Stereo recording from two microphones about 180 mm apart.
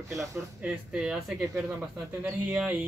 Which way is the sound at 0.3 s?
5° right (ahead or behind).